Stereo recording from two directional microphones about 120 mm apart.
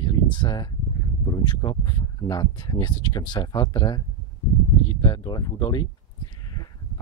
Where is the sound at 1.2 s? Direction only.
35° left (ahead or behind).